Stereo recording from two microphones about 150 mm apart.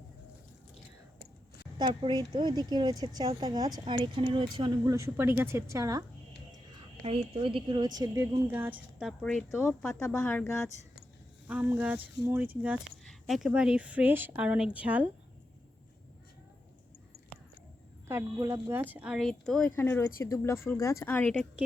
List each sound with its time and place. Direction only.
1.8 s a woman's voice: 30° right (ahead or behind)
4.9 s a woman's voice: 20° right (ahead or behind)
7.0 s a woman's voice: 40° right (ahead or behind); by 10.4 s 5° left (ahead or behind)
11.4 s a woman's voice: 10° right (ahead or behind)
18.1 s speech: 20° right (ahead or behind); by 21.4 s 10° left (ahead or behind)